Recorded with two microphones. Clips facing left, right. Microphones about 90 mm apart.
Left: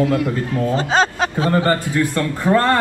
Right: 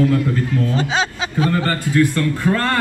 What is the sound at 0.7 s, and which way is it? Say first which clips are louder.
Speech: left 3 dB; 40° left (ahead or behind).